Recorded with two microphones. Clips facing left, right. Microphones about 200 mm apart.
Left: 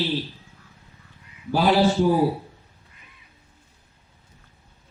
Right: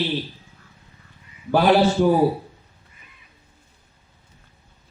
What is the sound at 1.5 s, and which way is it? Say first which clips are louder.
Speech: right 3 dB; 60° right (ahead or behind).